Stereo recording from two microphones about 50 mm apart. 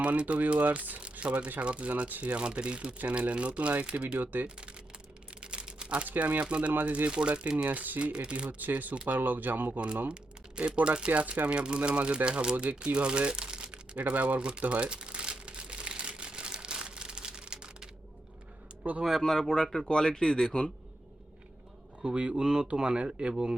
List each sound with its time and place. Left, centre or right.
0.0 s speech: right
5.4 s a sound: right
6.1 s speech: right
8.1 s speech: right
8.4 s speech: right
10.8 s speech: right
13.9 s speech: right
14.6 s crumpling: right
18.8 s speech: right
19.2 s speech: centre
22.0 s speech: centre